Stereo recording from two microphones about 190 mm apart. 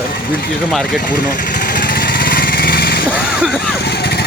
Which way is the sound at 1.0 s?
50° left (ahead or behind).